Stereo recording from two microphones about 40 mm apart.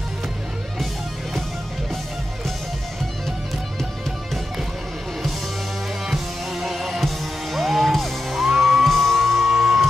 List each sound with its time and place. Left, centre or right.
6.0 s music: centre
8.8 s music: centre